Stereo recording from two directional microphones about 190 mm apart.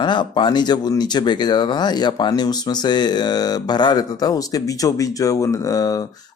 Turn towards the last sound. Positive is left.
turn(degrees=20)  # may be behind; listen again after turning